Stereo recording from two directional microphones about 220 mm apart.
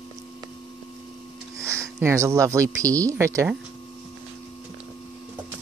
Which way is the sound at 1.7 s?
10° right (ahead or behind).